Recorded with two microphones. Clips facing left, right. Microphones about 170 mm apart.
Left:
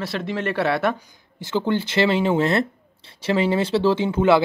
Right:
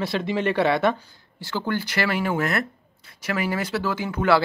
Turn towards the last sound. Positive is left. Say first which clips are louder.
# left 5 dB
turn(degrees=25)  # may be behind; listen again after turning